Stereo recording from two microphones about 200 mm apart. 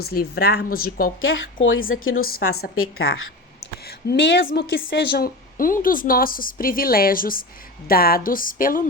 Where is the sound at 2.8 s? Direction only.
90° left.